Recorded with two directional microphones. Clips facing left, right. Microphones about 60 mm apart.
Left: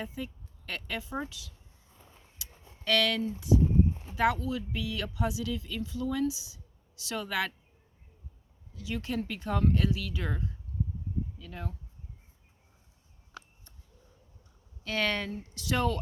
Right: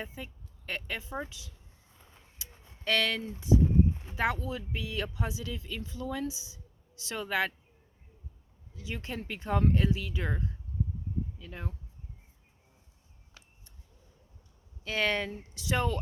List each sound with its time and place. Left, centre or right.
0.0 s speech: right
2.4 s a sound: right
4.1 s speech: right
8.7 s speech: right
14.8 s speech: centre